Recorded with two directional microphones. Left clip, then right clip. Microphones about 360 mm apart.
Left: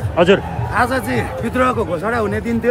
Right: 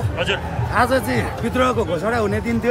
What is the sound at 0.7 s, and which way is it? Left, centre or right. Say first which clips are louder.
A man's voice: left 1 dB; centre.